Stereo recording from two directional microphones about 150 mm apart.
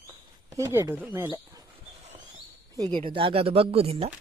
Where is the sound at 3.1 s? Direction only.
35° right (ahead or behind).